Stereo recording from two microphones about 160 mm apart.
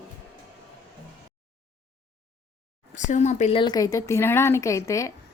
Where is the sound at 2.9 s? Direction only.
50° left (ahead or behind).